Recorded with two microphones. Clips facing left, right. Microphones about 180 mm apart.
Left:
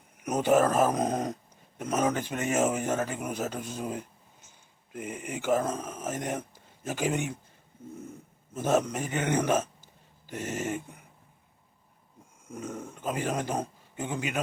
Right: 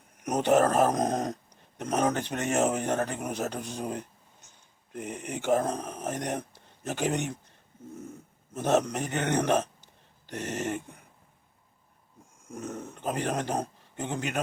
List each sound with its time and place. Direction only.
0.2 s a man's voice: 5° left (ahead or behind)
8.8 s a man's voice: 10° left (ahead or behind)
12.5 s a man's voice: 10° left (ahead or behind)